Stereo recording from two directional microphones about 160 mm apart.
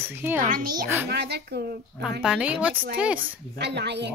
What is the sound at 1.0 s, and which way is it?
Speech, 90° right.